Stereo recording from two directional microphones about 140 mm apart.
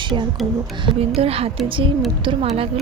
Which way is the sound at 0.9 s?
45° right (ahead or behind).